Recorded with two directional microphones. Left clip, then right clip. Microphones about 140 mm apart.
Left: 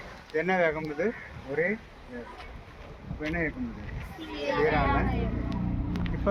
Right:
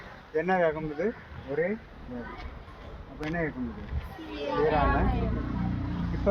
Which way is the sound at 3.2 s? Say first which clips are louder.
Left 1 dB; 30° right (ahead or behind).